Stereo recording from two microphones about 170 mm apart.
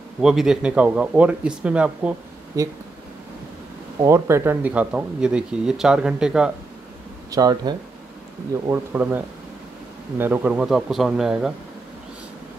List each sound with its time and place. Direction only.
0.2 s speech: centre (ahead or behind)
2.6 s speech: 20° right (ahead or behind)
4.0 s speech: 15° right (ahead or behind)
7.2 s speech: 20° right (ahead or behind); by 11.5 s 5° right (ahead or behind)